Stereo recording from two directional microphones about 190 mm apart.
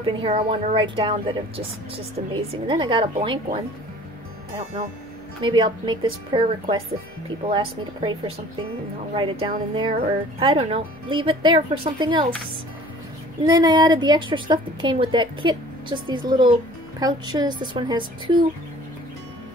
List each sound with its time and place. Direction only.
0.0 s a woman's voice: 25° right (ahead or behind)
5.4 s a woman's voice: 25° right (ahead or behind)
13.4 s a woman's voice: 20° right (ahead or behind)